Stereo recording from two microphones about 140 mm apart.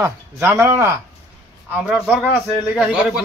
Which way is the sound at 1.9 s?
Centre (ahead or behind).